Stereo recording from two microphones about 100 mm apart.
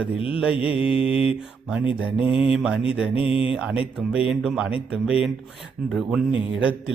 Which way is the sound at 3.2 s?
70° left (ahead or behind).